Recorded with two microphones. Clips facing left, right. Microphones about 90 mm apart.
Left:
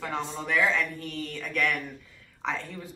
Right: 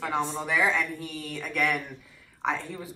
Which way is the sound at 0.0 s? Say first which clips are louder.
Right 3 dB; 15° right (ahead or behind).